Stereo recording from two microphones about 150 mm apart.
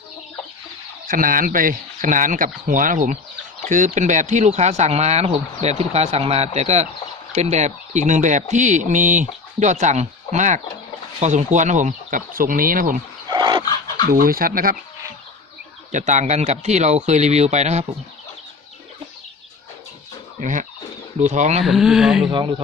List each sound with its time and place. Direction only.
1.0 s speech: 65° right (ahead or behind)
13.2 s dog: 30° right (ahead or behind)
14.0 s speech: 80° right
15.9 s speech: 55° right (ahead or behind)
20.4 s speech: 60° right (ahead or behind)
21.6 s speech: centre (ahead or behind)
22.3 s speech: 35° right (ahead or behind)